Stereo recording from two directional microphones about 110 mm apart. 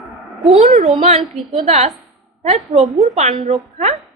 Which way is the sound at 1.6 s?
75° right (ahead or behind).